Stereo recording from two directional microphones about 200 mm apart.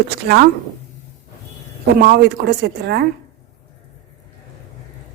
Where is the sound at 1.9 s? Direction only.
50° right (ahead or behind).